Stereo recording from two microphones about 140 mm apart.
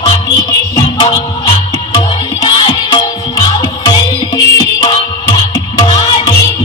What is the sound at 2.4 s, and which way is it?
Music, 35° left (ahead or behind).